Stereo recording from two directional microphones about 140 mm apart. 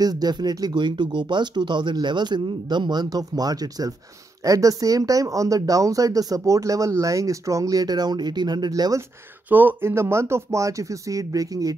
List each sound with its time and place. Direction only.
0.0 s speech: 30° right (ahead or behind)
9.5 s speech: 15° right (ahead or behind)